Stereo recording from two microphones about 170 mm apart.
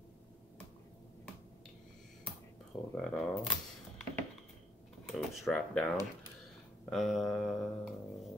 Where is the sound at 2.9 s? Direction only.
5° left (ahead or behind).